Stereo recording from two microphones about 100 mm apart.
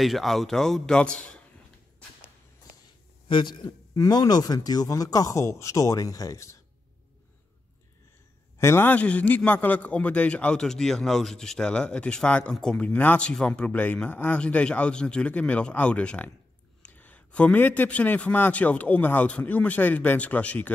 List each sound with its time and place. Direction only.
0.0 s a man's voice: centre (ahead or behind)
3.3 s a man's voice: 55° left (ahead or behind)
3.6 s speech: 35° left (ahead or behind)
8.5 s a man's voice: 25° left (ahead or behind)